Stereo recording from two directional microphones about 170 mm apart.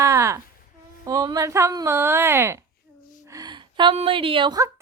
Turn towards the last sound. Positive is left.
turn(degrees=-25)  # may be behind; listen again after turning